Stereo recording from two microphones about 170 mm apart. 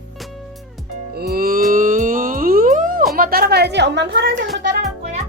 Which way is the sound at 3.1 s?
60° right (ahead or behind).